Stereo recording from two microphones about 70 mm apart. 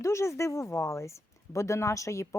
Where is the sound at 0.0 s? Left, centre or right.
Left.